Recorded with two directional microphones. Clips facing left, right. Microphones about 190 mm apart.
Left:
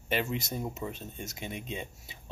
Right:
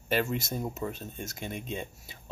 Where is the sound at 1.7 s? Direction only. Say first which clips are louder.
Right 2 dB; 50° right (ahead or behind).